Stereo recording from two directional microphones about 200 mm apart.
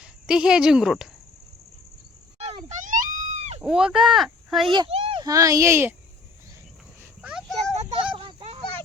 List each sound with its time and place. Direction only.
0.0 s speech: 5° right (ahead or behind)
2.4 s wail: 30° right (ahead or behind)
3.6 s speech: 5° right (ahead or behind)
4.7 s a child's voice: 25° right (ahead or behind)
7.2 s a sound: 5° right (ahead or behind)
8.1 s children playing: 25° right (ahead or behind)